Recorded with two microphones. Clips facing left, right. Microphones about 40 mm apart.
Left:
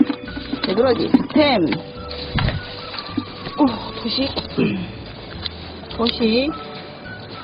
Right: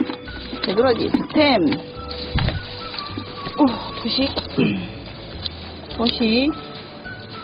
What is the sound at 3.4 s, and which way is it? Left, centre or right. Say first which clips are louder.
A woman's voice: right 1 dB; centre.